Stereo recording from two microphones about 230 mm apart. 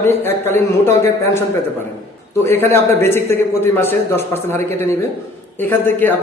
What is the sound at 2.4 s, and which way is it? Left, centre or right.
A man's voice, centre.